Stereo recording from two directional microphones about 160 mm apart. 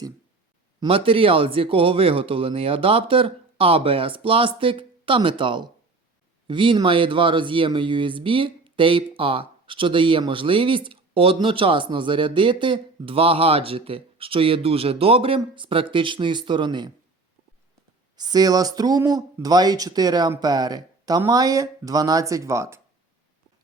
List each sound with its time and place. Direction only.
0.8 s speech: 35° right (ahead or behind)
18.2 s speech: 25° right (ahead or behind)